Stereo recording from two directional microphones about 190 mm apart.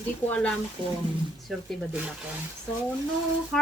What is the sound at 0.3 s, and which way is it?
Speech, 5° left (ahead or behind).